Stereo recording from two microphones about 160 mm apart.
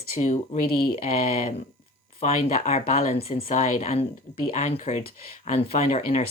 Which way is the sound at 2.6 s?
45° left (ahead or behind).